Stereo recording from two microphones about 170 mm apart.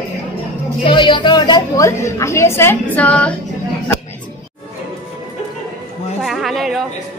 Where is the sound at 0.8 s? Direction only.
30° left (ahead or behind); by 3.3 s 10° left (ahead or behind).